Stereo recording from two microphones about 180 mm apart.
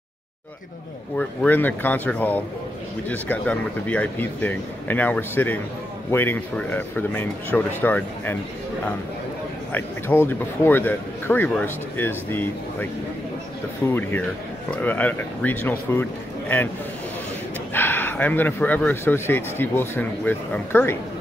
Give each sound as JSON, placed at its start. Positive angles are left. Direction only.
{"t": 1.1, "sound": "speech", "side_deg": 10}
{"t": 9.7, "sound": "speech", "side_deg": 10}
{"t": 13.8, "sound": "speech", "side_deg": 10}
{"t": 17.7, "sound": "speech", "side_deg": 10}